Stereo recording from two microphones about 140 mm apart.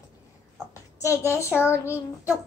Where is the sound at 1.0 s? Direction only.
20° left (ahead or behind).